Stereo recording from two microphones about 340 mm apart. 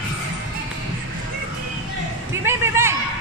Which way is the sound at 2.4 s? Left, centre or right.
Centre.